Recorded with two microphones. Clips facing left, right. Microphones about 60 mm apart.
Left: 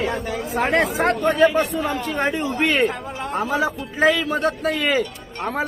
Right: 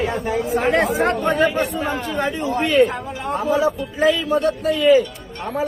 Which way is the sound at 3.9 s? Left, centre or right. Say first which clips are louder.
Left 1 dB; left.